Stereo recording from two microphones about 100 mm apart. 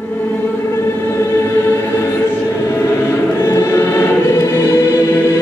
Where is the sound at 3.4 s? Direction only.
30° left (ahead or behind).